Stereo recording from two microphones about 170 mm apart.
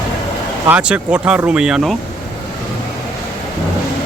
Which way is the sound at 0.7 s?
5° right (ahead or behind).